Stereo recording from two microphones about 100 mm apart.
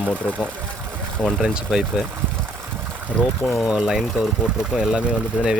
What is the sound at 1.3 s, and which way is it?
Speech, centre (ahead or behind).